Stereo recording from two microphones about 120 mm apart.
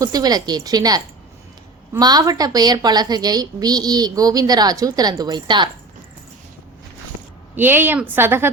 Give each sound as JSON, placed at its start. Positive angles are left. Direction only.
{"t": 0.0, "sound": "a woman's voice", "side_deg": -30}
{"t": 7.5, "sound": "a woman's voice", "side_deg": -15}